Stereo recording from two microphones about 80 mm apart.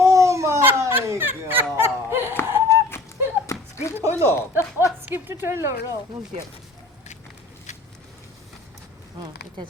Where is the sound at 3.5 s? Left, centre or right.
Left.